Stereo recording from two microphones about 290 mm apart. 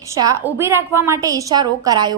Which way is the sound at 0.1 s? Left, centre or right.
Centre.